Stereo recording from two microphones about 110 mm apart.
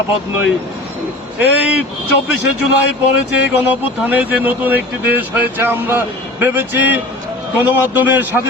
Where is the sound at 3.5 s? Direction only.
15° right (ahead or behind).